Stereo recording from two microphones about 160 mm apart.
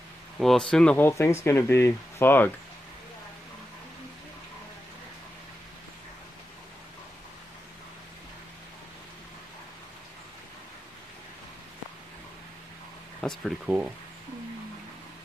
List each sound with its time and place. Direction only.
0.4 s speech: centre (ahead or behind)
13.2 s speech: 5° left (ahead or behind)